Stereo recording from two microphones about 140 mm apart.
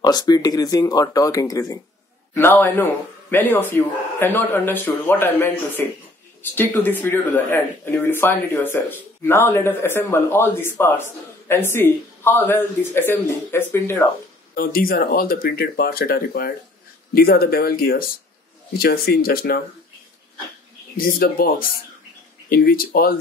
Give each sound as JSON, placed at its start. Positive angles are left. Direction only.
{"t": 0.0, "sound": "speech", "side_deg": 30}
{"t": 14.5, "sound": "speech", "side_deg": 90}
{"t": 21.0, "sound": "speech", "side_deg": 90}